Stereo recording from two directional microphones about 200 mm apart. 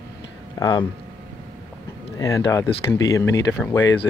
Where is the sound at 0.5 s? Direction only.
20° left (ahead or behind).